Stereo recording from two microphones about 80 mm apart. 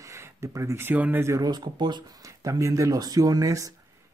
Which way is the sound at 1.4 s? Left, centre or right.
Right.